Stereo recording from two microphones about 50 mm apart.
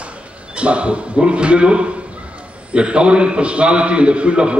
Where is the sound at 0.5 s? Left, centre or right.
Right.